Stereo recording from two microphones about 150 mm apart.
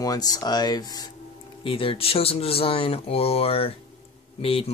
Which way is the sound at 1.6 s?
35° left (ahead or behind).